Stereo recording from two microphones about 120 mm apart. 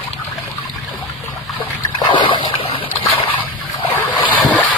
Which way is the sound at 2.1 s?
45° left (ahead or behind).